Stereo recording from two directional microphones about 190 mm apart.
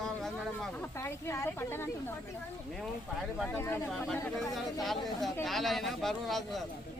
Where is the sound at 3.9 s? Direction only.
Centre (ahead or behind).